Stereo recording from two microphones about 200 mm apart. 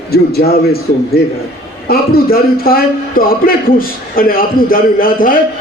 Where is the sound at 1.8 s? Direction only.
50° left (ahead or behind).